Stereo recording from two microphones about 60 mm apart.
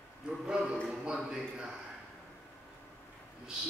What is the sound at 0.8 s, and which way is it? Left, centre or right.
Speech, centre.